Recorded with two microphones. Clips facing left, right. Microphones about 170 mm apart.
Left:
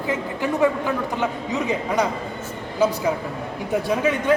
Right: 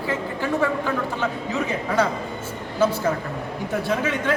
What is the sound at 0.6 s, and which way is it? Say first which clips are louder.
Speech: left 5 dB; 15° left (ahead or behind).